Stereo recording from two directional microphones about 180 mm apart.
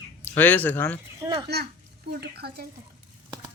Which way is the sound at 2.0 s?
60° right (ahead or behind).